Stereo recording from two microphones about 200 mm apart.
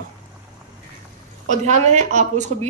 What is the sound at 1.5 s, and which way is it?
Speech, 35° right (ahead or behind).